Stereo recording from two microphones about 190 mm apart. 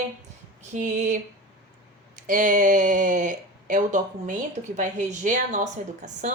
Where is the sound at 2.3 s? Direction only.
45° right (ahead or behind).